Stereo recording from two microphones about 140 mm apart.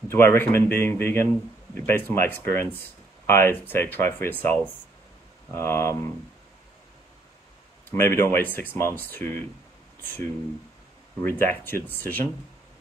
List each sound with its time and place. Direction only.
0.1 s speech: 15° left (ahead or behind)
7.9 s speech: 15° left (ahead or behind)
11.2 s speech: 15° left (ahead or behind)